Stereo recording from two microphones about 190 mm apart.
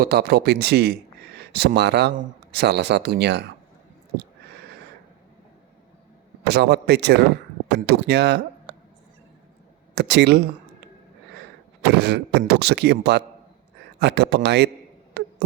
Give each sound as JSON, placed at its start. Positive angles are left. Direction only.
{"t": 0.0, "sound": "speech", "side_deg": -55}
{"t": 6.5, "sound": "speech", "side_deg": -60}
{"t": 9.9, "sound": "speech", "side_deg": -65}
{"t": 11.8, "sound": "speech", "side_deg": -60}
{"t": 15.2, "sound": "a sound", "side_deg": -60}